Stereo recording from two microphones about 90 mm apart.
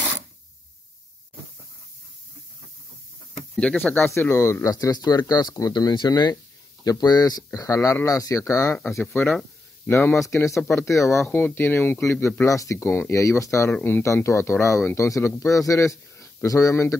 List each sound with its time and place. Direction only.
3.5 s speech: 15° left (ahead or behind)
4.1 s speech: 30° left (ahead or behind)
9.8 s speech: 25° left (ahead or behind)
11.2 s speech: 20° left (ahead or behind)
12.4 s speech: 35° left (ahead or behind)
12.7 s speech: 25° left (ahead or behind)